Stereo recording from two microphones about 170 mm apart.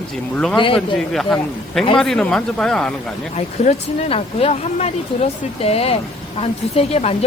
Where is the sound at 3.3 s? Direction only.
40° left (ahead or behind).